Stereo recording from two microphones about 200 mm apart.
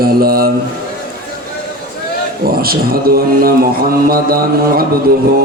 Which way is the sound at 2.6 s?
50° right (ahead or behind).